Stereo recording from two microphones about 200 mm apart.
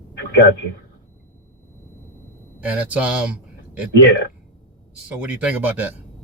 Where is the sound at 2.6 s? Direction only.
10° right (ahead or behind).